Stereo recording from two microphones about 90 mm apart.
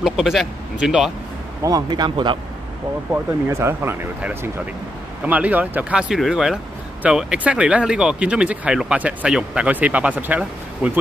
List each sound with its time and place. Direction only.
0.0 s speech: 5° right (ahead or behind)
1.6 s speech: 40° right (ahead or behind); by 2.3 s 60° right (ahead or behind)
3.4 s speech: 30° right (ahead or behind)
5.2 s speech: 15° right (ahead or behind)
6.1 s speech: 5° right (ahead or behind); by 10.9 s 20° right (ahead or behind)